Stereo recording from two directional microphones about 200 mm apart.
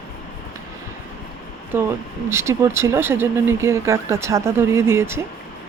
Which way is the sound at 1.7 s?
10° right (ahead or behind).